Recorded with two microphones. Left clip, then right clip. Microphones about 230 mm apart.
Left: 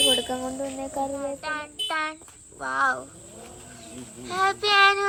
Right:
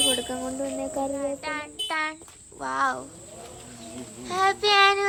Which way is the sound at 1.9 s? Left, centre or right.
Centre.